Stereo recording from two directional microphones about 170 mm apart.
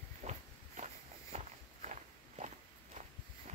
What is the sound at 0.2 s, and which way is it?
Walk, 45° right (ahead or behind).